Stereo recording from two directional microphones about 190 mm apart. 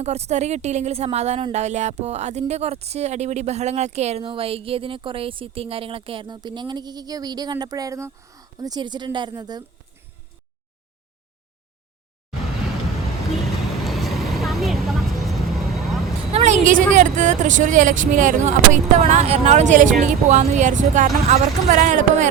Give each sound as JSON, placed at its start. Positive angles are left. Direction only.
{"t": 0.0, "sound": "speech", "side_deg": -35}
{"t": 13.8, "sound": "vehicle", "side_deg": 0}
{"t": 16.3, "sound": "a sound", "side_deg": -35}
{"t": 16.9, "sound": "speech", "side_deg": -40}